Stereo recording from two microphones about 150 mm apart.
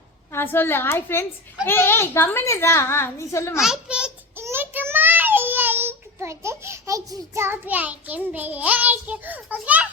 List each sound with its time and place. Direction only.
0.3 s a child's voice: 15° left (ahead or behind)
3.6 s a child's voice: 5° right (ahead or behind)
4.4 s child singing: 15° right (ahead or behind)